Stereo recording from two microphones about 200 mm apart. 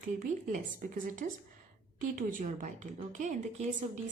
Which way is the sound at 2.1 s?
40° right (ahead or behind).